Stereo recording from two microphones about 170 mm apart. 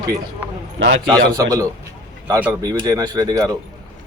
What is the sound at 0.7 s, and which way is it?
Speech, 90° right.